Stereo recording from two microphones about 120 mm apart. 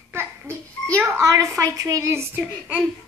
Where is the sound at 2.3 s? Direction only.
10° right (ahead or behind).